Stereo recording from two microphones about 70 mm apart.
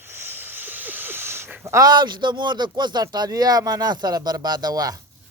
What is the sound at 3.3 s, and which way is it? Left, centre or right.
Speech, right.